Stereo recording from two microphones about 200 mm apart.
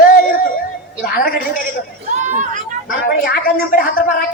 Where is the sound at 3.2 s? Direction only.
45° left (ahead or behind).